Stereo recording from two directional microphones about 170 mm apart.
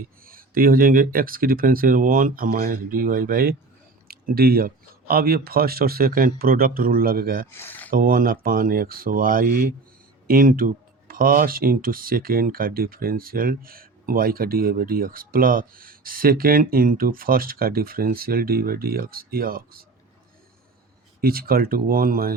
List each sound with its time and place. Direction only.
0.3 s speech: 55° right (ahead or behind)
7.5 s speech: 10° left (ahead or behind)
7.9 s speech: 55° right (ahead or behind)
21.2 s speech: 60° right (ahead or behind)